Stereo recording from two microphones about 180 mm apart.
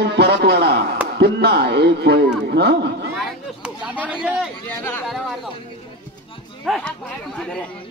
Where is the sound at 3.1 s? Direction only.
Centre (ahead or behind).